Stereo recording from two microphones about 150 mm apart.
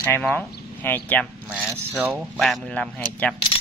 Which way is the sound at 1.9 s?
10° right (ahead or behind).